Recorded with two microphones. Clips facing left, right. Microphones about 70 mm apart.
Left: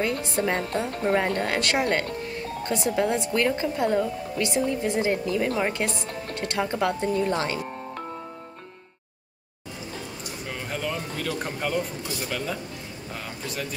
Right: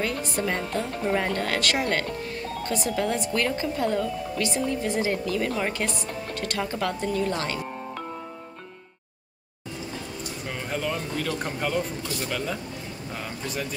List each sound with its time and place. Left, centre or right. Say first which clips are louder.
0.0 s speech: left 2 dB; left
10.5 s a sound: right 1 dB; centre
12.2 s speech: even; centre